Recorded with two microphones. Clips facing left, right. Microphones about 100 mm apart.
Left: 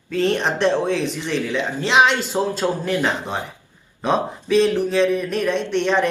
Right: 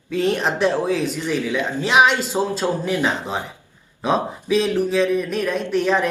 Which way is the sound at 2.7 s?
15° right (ahead or behind).